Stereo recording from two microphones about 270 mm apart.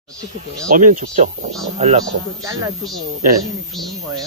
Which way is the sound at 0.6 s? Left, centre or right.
Right.